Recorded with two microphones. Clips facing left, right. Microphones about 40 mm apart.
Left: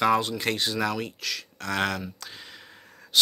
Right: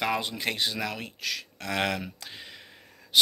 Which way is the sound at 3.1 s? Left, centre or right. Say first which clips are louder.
Right 1 dB; centre.